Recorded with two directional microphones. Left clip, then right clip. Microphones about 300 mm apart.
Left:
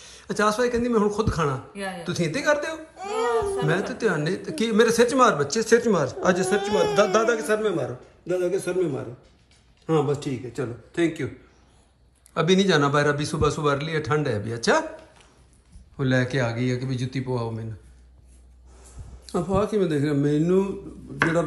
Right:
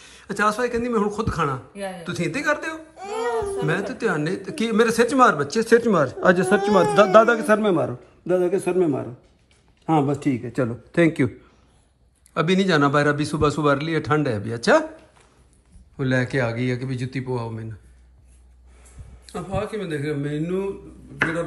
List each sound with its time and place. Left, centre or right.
0.0 s a man's voice: centre
9.8 s speech: centre
12.4 s a man's voice: centre
16.0 s a man's voice: centre
19.2 s speech: centre